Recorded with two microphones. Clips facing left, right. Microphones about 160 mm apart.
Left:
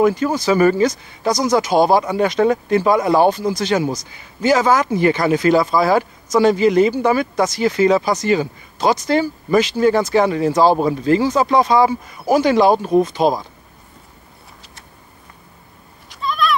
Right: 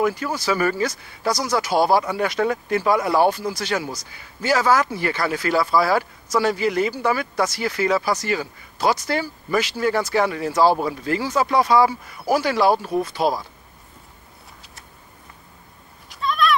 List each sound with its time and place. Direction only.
0.0 s speech: 20° left (ahead or behind)
16.1 s goat: centre (ahead or behind)